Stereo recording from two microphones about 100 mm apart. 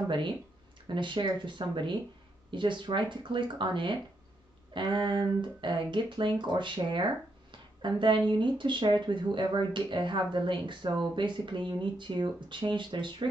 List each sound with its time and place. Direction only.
0.8 s speech: 55° right (ahead or behind)